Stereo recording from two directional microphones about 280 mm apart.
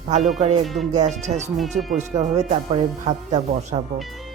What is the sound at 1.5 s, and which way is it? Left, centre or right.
Speech, centre.